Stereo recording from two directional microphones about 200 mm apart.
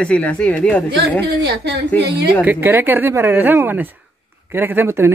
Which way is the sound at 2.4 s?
10° right (ahead or behind).